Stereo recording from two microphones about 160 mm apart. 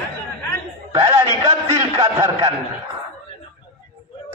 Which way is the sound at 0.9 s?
30° right (ahead or behind).